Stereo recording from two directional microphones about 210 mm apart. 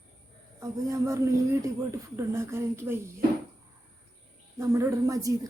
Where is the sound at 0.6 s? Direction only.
15° right (ahead or behind).